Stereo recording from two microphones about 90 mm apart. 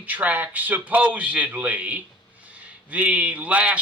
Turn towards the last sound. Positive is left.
turn(degrees=-15)  # may be behind; listen again after turning